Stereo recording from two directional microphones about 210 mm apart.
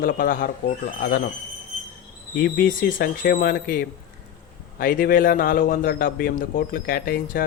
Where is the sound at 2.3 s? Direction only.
45° left (ahead or behind).